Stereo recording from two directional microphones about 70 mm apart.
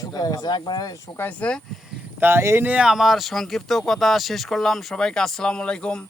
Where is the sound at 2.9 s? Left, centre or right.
Centre.